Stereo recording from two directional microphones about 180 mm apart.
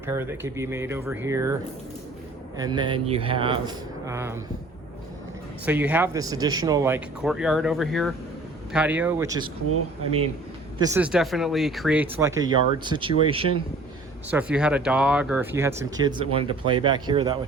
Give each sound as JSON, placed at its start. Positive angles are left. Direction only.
{"t": 0.0, "sound": "speech", "side_deg": -15}
{"t": 2.6, "sound": "speech", "side_deg": -25}
{"t": 5.6, "sound": "speech", "side_deg": -10}
{"t": 7.2, "sound": "speech", "side_deg": -5}
{"t": 10.8, "sound": "speech", "side_deg": -20}
{"t": 11.0, "sound": "speech", "side_deg": -5}
{"t": 14.3, "sound": "speech", "side_deg": -10}